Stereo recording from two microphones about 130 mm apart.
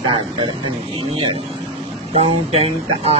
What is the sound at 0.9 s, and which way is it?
Speech, 45° right (ahead or behind).